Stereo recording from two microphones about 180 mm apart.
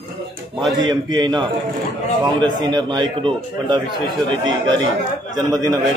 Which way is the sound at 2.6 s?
25° right (ahead or behind).